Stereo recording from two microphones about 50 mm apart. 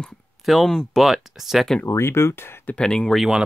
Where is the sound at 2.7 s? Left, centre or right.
Centre.